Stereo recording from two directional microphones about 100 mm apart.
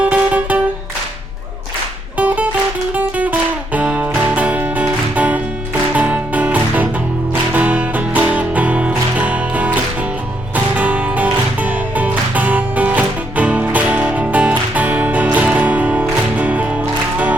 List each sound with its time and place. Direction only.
0.0 s music: 15° right (ahead or behind)
2.1 s music: 15° right (ahead or behind)